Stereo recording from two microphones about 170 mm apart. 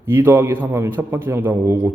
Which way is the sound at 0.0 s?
15° right (ahead or behind).